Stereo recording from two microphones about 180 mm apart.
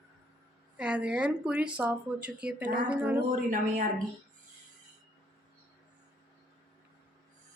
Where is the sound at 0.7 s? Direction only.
5° right (ahead or behind).